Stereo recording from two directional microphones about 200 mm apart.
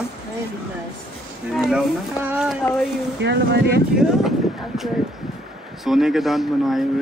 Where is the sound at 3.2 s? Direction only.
60° right (ahead or behind).